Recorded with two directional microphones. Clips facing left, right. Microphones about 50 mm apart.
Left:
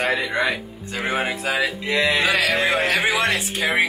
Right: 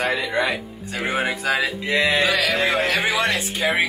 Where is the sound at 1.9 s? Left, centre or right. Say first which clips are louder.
Right 1 dB; right.